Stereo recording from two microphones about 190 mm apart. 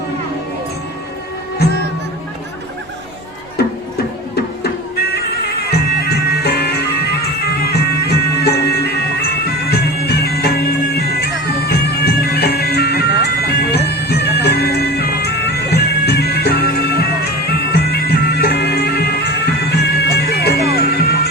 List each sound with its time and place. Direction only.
5.7 s bagpipes: 55° left (ahead or behind)
9.6 s music: 55° left (ahead or behind)